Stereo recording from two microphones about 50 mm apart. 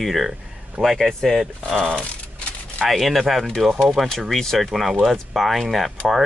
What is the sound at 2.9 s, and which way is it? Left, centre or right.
Speech, centre.